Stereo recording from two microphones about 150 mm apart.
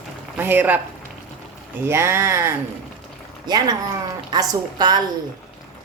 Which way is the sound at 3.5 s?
25° right (ahead or behind).